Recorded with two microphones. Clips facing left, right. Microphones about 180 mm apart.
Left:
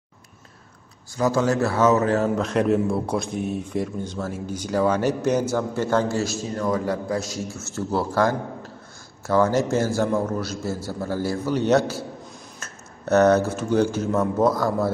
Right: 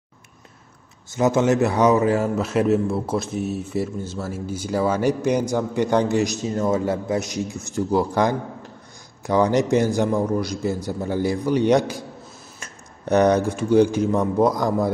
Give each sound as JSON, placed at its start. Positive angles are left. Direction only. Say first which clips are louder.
{"t": 1.1, "sound": "a man's voice", "louder": "right 3 dB", "side_deg": -20}